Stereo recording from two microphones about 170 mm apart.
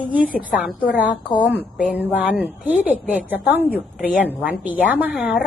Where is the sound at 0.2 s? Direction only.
55° left (ahead or behind).